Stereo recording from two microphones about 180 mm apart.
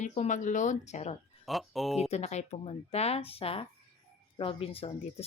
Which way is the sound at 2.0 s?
35° left (ahead or behind).